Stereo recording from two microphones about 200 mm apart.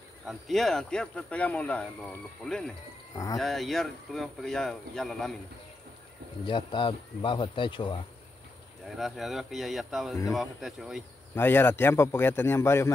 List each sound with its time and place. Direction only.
0.3 s speech: centre (ahead or behind)
6.4 s speech: 25° left (ahead or behind)
8.8 s speech: centre (ahead or behind)
11.3 s a man's voice: 10° left (ahead or behind)